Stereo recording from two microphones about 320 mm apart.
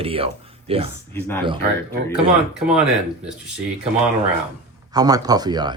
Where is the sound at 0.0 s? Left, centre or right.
Centre.